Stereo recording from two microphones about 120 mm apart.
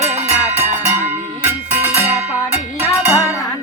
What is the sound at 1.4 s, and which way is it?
Music, 15° right (ahead or behind).